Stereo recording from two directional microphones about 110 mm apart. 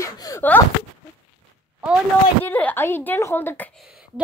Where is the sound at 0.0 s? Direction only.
35° left (ahead or behind).